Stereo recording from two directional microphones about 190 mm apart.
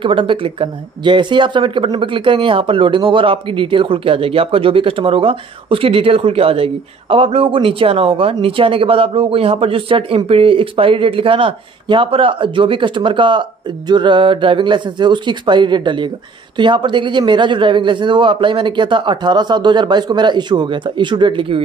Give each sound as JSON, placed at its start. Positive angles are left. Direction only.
{"t": 0.0, "sound": "speech", "side_deg": -25}